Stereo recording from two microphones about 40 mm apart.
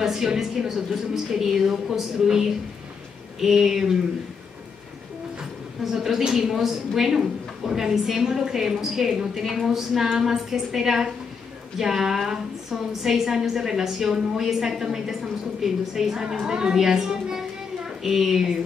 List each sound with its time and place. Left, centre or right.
0.0 s a woman's voice: centre
5.9 s a woman's voice: centre